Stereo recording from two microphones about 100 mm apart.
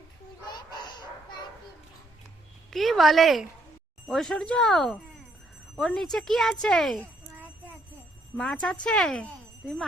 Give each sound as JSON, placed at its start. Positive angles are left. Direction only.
{"t": 0.4, "sound": "chicken", "side_deg": 45}
{"t": 2.6, "sound": "speech", "side_deg": 0}
{"t": 8.4, "sound": "speech", "side_deg": 5}